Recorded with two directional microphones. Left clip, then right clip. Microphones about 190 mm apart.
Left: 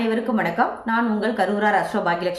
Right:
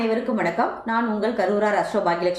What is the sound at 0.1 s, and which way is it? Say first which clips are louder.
A woman's voice: even; 20° left (ahead or behind).